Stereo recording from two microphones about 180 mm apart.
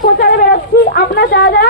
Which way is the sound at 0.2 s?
60° left (ahead or behind).